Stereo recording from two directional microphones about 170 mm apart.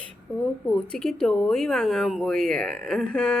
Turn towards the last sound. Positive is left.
turn(degrees=5)  # may be behind; listen again after turning